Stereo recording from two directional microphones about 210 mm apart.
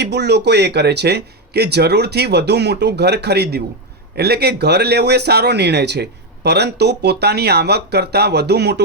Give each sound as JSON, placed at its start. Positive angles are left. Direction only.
{"t": 0.0, "sound": "speech", "side_deg": -55}